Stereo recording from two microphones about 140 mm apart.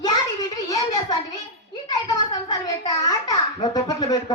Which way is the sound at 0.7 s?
30° left (ahead or behind).